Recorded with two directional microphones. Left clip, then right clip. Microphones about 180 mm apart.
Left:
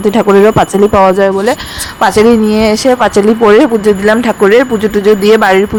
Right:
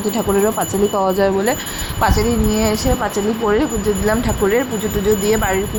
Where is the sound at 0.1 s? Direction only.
45° left (ahead or behind).